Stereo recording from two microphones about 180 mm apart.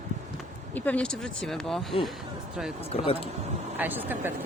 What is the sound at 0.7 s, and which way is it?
Speech, 10° left (ahead or behind).